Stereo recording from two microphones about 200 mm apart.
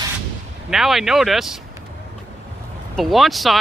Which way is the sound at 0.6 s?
Centre (ahead or behind).